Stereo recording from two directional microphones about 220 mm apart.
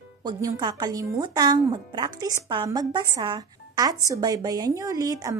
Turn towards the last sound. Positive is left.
turn(degrees=-15)  # may be behind; listen again after turning